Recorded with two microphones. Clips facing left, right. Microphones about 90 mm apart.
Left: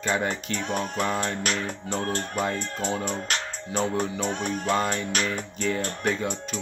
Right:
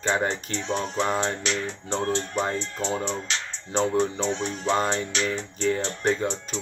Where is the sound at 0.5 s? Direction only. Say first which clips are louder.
Even; 50° left (ahead or behind).